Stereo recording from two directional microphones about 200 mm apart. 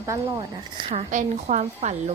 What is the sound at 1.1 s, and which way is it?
A woman's voice, 40° right (ahead or behind).